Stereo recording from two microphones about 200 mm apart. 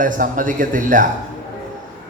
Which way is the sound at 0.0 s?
40° right (ahead or behind).